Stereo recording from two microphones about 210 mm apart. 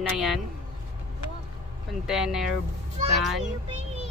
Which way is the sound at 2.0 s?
Centre (ahead or behind).